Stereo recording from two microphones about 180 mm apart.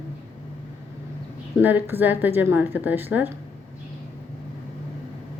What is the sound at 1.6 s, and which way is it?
A woman's voice, 10° right (ahead or behind).